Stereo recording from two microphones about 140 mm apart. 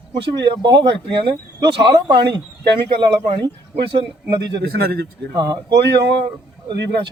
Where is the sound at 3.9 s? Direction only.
30° right (ahead or behind).